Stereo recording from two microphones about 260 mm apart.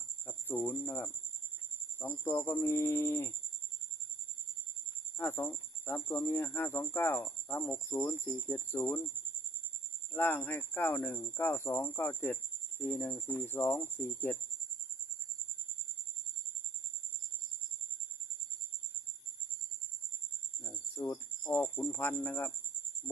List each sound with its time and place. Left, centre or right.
0.3 s speech: centre
5.1 s speech: centre
10.1 s speech: centre
20.6 s speech: centre